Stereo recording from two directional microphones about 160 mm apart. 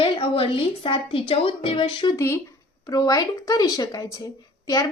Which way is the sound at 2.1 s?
15° left (ahead or behind).